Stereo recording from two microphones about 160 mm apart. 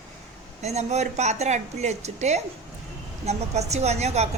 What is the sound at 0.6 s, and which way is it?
A woman's voice, 45° right (ahead or behind).